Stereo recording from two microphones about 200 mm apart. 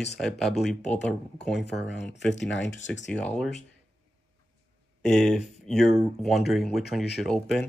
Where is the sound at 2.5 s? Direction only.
65° left (ahead or behind).